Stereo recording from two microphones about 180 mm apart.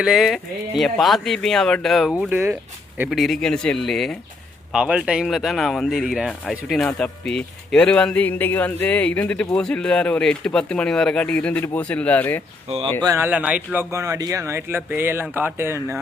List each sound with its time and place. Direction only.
0.0 s speech: centre (ahead or behind)
12.6 s speech: 35° right (ahead or behind)
13.0 s speech: 15° right (ahead or behind)